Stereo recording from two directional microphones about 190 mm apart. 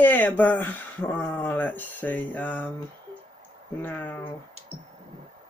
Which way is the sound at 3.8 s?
10° left (ahead or behind).